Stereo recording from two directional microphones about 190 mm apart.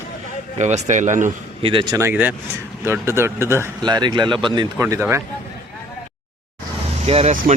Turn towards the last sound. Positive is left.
turn(degrees=-35)  # may be behind; listen again after turning